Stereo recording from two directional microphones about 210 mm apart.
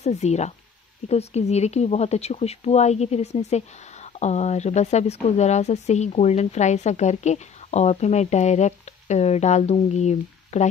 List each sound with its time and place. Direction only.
0.0 s speech: 30° left (ahead or behind)